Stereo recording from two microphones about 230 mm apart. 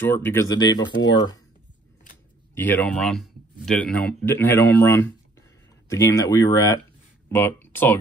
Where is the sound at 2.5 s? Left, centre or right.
Centre.